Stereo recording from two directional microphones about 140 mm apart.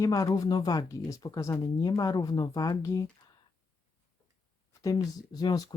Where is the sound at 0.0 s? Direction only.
25° left (ahead or behind).